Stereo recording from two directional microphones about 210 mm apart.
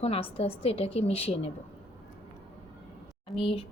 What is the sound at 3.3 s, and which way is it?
Speech, 25° left (ahead or behind).